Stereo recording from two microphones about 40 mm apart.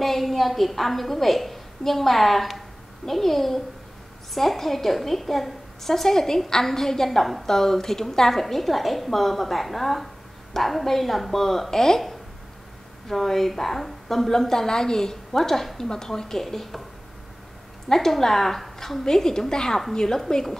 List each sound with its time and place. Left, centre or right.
0.0 s a woman's voice: centre
13.1 s a woman's voice: centre
17.8 s a woman's voice: centre
19.0 s a woman's voice: centre